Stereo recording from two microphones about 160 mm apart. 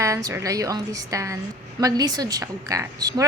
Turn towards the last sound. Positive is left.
turn(degrees=-20)  # may be behind; listen again after turning